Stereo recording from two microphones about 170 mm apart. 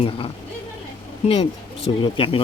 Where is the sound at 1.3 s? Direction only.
35° left (ahead or behind).